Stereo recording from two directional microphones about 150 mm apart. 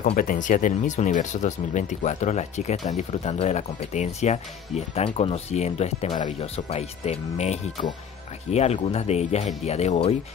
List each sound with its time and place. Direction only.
0.0 s speech: 65° left (ahead or behind); by 10.1 s 45° left (ahead or behind)